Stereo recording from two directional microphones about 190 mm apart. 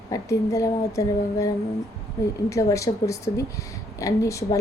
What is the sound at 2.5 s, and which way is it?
Speech, 15° left (ahead or behind).